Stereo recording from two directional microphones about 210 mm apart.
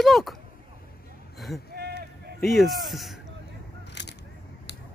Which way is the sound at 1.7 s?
50° right (ahead or behind).